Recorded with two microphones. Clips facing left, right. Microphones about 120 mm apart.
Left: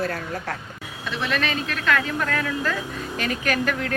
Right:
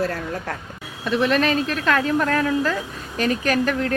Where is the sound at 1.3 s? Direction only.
40° right (ahead or behind).